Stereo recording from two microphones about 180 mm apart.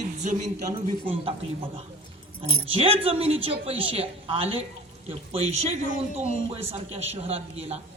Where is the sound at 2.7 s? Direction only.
30° right (ahead or behind).